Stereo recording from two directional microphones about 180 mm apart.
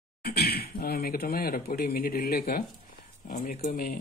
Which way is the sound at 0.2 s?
60° left (ahead or behind).